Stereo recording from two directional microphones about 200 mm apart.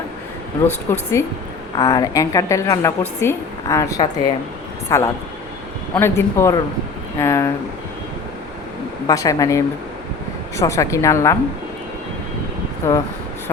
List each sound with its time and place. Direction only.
0.6 s speech: 10° left (ahead or behind)
9.0 s speech: 15° left (ahead or behind)
12.8 s speech: 15° left (ahead or behind)